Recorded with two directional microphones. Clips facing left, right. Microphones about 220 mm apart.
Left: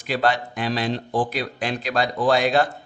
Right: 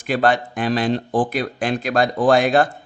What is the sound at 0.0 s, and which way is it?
Speech, 50° right (ahead or behind).